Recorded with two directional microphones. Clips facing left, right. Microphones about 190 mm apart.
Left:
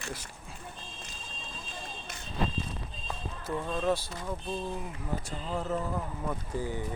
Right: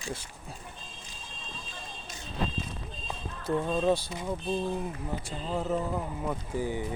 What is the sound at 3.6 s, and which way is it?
Speech, 15° right (ahead or behind).